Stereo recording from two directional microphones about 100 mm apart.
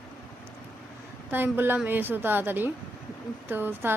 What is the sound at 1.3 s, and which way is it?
Speech, 20° right (ahead or behind).